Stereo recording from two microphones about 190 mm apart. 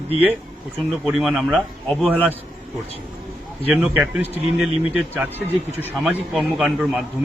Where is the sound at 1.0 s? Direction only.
5° right (ahead or behind).